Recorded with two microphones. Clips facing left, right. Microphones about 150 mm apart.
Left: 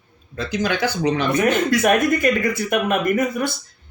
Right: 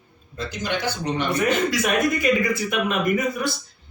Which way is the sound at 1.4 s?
55° left (ahead or behind).